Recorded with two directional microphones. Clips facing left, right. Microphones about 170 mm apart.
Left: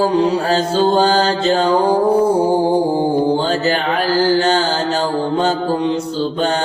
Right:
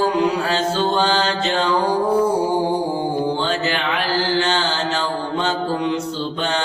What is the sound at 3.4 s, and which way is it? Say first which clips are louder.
Mantra: left 4 dB; 40° left (ahead or behind).